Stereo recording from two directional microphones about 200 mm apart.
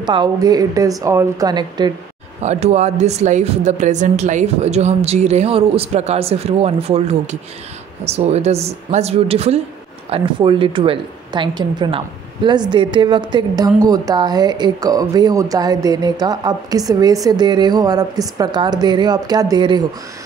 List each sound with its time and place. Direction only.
0.0 s a woman's voice: 20° right (ahead or behind)
2.4 s a woman's voice: 35° right (ahead or behind)